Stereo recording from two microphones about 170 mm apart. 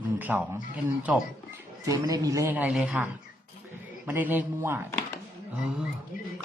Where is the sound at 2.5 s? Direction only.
5° right (ahead or behind).